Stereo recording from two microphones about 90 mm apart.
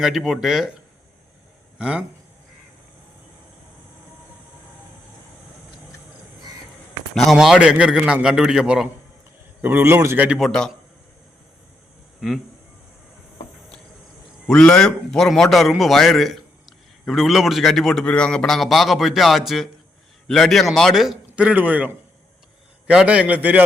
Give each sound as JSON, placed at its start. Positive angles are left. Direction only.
{"t": 0.0, "sound": "a man's voice", "side_deg": 0}
{"t": 1.8, "sound": "a man's voice", "side_deg": -10}
{"t": 7.3, "sound": "a man's voice", "side_deg": -5}
{"t": 9.6, "sound": "a man's voice", "side_deg": -25}
{"t": 10.3, "sound": "a man's voice", "side_deg": 5}
{"t": 12.2, "sound": "a man's voice", "side_deg": -5}
{"t": 14.4, "sound": "a man's voice", "side_deg": 10}
{"t": 21.3, "sound": "a man's voice", "side_deg": -15}